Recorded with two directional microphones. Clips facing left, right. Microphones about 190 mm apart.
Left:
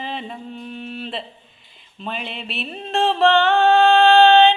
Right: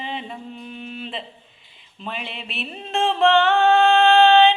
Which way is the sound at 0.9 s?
35° left (ahead or behind).